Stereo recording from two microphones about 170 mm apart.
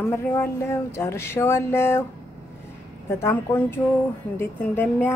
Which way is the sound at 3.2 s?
10° left (ahead or behind).